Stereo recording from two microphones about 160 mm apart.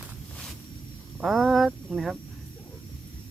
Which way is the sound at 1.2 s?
Centre (ahead or behind).